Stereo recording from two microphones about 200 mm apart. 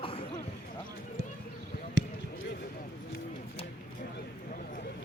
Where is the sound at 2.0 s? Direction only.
60° right (ahead or behind).